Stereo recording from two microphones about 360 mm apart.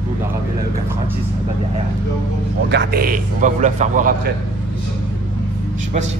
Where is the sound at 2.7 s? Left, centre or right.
Right.